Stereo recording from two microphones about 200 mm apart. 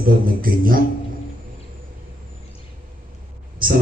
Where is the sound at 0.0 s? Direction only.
45° right (ahead or behind).